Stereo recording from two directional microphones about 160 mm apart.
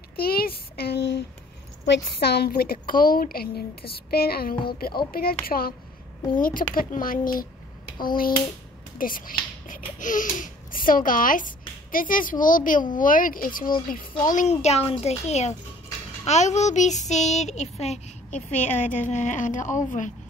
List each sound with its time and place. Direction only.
0.1 s a woman's voice: 70° left (ahead or behind)
8.9 s speech: 60° left (ahead or behind)